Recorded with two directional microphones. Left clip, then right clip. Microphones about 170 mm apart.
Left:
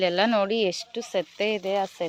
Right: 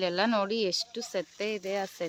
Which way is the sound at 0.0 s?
10° left (ahead or behind).